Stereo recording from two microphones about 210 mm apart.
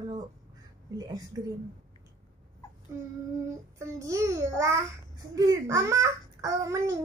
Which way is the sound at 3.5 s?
15° right (ahead or behind).